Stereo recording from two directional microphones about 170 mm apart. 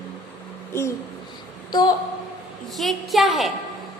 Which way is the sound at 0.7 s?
15° left (ahead or behind).